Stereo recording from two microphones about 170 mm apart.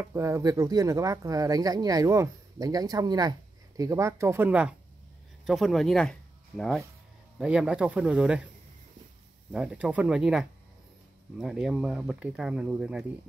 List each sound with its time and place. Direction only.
0.0 s speech: 15° right (ahead or behind)
9.5 s speech: 5° right (ahead or behind)